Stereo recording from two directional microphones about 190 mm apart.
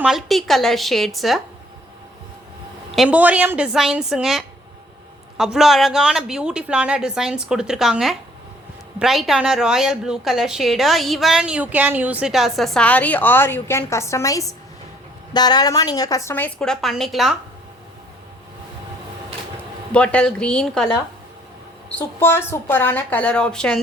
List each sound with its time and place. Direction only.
0.0 s a woman's voice: centre (ahead or behind)
2.9 s a woman's voice: 5° right (ahead or behind)
19.9 s a woman's voice: 5° left (ahead or behind)
22.2 s a woman's voice: 10° left (ahead or behind)